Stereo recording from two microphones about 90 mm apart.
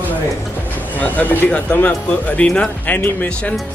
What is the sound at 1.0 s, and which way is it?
Speech, 20° left (ahead or behind).